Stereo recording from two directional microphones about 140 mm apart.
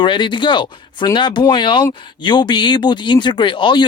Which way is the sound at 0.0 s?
35° left (ahead or behind).